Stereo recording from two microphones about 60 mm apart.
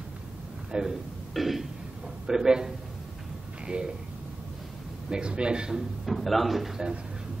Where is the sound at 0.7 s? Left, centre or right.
Centre.